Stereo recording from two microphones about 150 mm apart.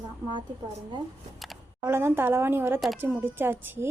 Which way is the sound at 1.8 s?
15° right (ahead or behind).